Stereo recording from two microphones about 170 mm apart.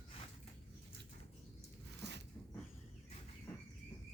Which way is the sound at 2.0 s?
85° right.